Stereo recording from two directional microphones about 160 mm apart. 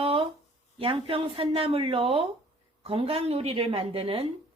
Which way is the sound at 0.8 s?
35° right (ahead or behind).